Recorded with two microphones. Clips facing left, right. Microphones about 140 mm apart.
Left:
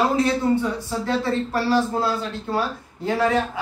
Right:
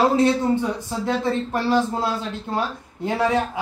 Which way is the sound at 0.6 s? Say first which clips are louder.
Even; 20° right (ahead or behind).